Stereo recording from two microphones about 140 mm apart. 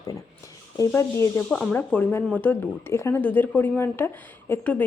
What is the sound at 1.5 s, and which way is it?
Speech, 5° left (ahead or behind).